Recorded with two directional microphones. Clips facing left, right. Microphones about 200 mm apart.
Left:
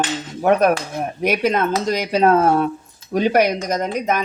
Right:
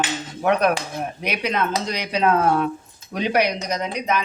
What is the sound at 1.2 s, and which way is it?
Speech, 45° left (ahead or behind).